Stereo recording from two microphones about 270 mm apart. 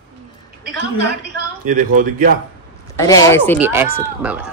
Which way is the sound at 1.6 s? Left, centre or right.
Right.